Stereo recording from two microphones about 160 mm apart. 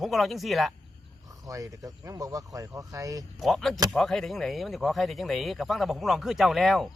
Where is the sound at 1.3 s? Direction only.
20° right (ahead or behind).